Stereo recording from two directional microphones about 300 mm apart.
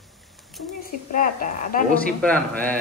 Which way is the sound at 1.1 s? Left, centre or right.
Left.